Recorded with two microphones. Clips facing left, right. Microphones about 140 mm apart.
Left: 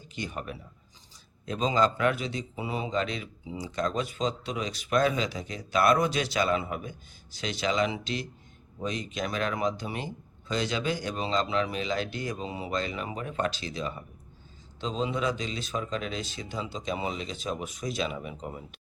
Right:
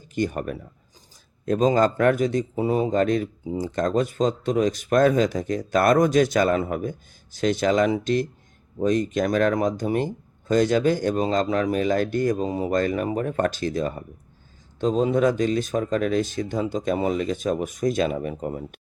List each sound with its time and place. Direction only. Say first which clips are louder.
0.1 s speech: right 11 dB; 50° right (ahead or behind)